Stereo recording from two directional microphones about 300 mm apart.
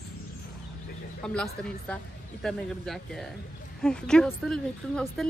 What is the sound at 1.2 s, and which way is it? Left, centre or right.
A woman's voice, centre.